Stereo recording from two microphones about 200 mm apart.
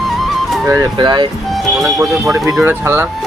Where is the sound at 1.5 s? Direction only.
Centre (ahead or behind).